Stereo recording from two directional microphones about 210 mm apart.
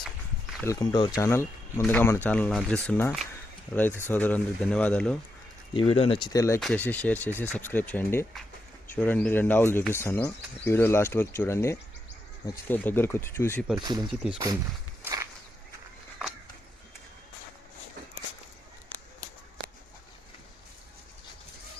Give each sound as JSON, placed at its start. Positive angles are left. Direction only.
{"t": 0.6, "sound": "speech", "side_deg": 15}
{"t": 5.7, "sound": "speech", "side_deg": 25}
{"t": 6.6, "sound": "speech", "side_deg": 5}
{"t": 13.7, "sound": "speech", "side_deg": -20}
{"t": 15.0, "sound": "walk", "side_deg": -15}